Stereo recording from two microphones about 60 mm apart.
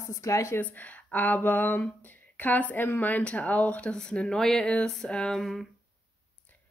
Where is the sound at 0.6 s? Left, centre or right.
Left; by 5.6 s centre.